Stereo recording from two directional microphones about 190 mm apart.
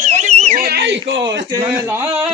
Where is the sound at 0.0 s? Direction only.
40° right (ahead or behind).